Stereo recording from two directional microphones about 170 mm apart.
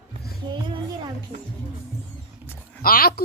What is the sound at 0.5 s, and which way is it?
Speech, 25° right (ahead or behind).